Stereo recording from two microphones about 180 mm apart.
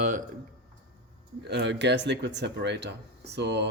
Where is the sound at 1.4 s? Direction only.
70° right (ahead or behind).